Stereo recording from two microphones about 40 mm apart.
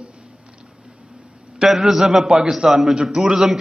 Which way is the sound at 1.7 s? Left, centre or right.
Centre.